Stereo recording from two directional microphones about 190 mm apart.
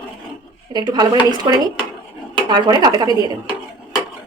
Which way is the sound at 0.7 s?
20° right (ahead or behind).